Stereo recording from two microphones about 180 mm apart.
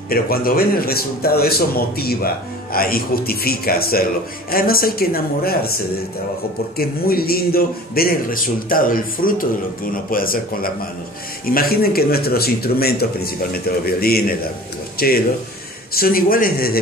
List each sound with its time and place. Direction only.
0.1 s speech: 55° left (ahead or behind)
6.8 s a man's voice: 55° left (ahead or behind)